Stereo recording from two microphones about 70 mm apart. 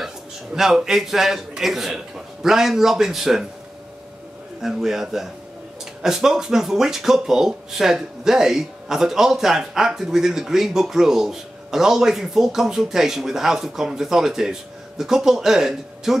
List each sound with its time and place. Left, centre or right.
0.6 s a man's voice: centre
4.6 s a man's voice: centre